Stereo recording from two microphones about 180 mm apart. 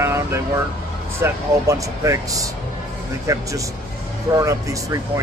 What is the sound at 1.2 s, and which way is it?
Speech, 15° right (ahead or behind).